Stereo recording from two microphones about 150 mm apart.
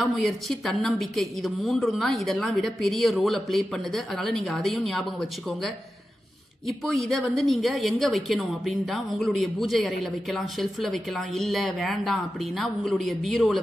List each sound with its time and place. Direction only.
0.0 s a woman's voice: centre (ahead or behind)
6.8 s a woman's voice: 5° left (ahead or behind)